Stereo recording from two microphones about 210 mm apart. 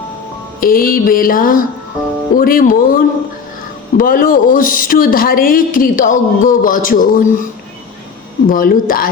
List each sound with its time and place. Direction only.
0.6 s music: 45° left (ahead or behind)
3.9 s speech: 40° left (ahead or behind)
8.4 s music: 45° left (ahead or behind)